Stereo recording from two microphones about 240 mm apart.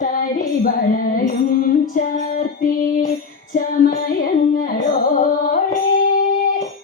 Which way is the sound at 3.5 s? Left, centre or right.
Left.